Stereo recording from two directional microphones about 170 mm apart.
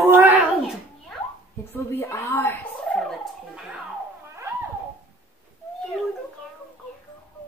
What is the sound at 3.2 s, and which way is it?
Music, 5° right (ahead or behind).